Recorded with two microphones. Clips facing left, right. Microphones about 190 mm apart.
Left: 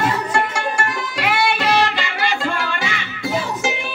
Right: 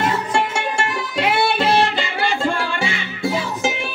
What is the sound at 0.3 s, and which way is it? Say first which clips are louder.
Music: even; 25° right (ahead or behind).